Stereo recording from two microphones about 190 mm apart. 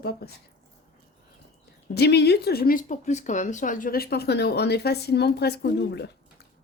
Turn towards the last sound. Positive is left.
turn(degrees=60)  # may be behind; listen again after turning